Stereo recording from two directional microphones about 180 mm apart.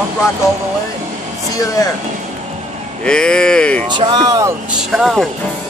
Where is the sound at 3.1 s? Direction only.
5° left (ahead or behind).